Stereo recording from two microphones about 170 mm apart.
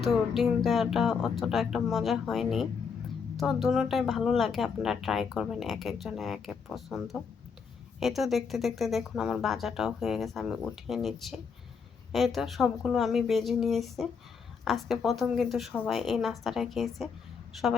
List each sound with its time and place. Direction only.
0.0 s speech: centre (ahead or behind)